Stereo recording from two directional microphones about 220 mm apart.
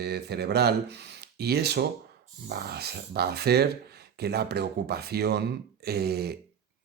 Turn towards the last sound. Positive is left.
turn(degrees=-45)  # may be behind; listen again after turning